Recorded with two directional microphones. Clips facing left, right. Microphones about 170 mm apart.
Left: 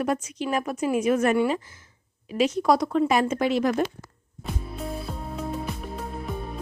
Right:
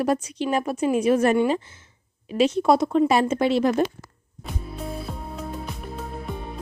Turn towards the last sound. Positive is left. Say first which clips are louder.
# even
turn(degrees=0)  # may be behind; listen again after turning